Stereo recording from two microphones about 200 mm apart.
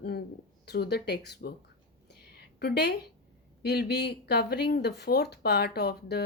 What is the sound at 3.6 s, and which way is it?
Speech, 55° left (ahead or behind).